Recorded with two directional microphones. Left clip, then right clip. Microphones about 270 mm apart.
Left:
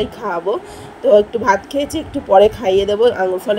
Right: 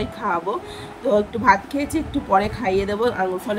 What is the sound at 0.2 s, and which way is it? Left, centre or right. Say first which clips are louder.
Speech: right 1 dB; left.